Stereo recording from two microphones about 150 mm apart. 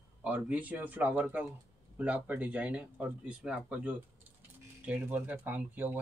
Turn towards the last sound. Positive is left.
turn(degrees=-15)  # may be behind; listen again after turning